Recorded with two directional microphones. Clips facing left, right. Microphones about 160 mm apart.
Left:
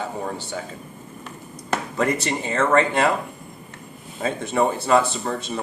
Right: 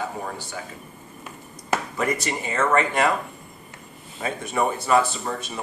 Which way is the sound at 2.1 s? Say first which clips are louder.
Left 2 dB; 30° left (ahead or behind).